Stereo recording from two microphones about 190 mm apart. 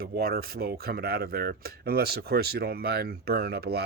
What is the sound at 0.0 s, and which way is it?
Speech, 55° right (ahead or behind).